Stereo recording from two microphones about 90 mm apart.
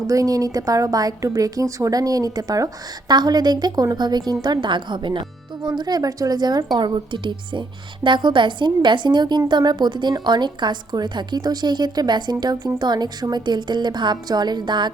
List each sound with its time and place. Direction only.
0.1 s a woman's voice: 40° right (ahead or behind); by 14.9 s 55° right (ahead or behind)